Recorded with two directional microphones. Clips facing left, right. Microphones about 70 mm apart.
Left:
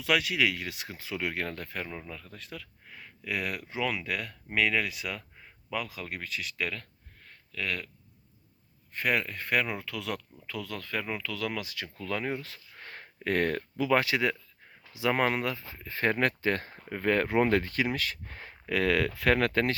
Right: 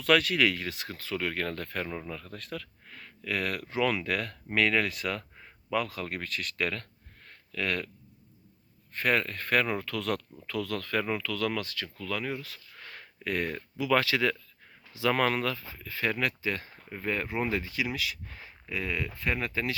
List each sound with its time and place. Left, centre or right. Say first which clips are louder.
0.0 s speech: right 3 dB; centre
8.9 s speech: right 1 dB; centre
11.9 s speech: left 2 dB; left
13.9 s speech: right 1 dB; left
15.7 s speech: left 2 dB; left